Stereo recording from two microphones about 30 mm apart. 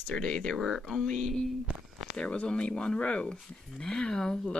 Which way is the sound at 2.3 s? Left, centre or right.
Left.